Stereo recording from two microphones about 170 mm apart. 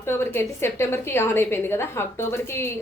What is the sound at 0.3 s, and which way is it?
A woman's voice, 15° left (ahead or behind).